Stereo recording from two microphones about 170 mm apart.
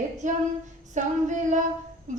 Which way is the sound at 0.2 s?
45° right (ahead or behind).